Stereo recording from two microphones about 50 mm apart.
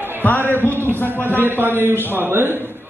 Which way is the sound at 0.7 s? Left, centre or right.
Right.